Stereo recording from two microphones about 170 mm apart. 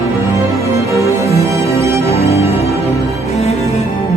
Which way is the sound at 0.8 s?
20° right (ahead or behind).